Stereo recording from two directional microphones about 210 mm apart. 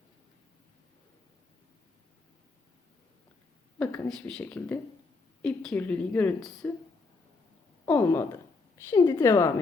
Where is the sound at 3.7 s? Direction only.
5° left (ahead or behind).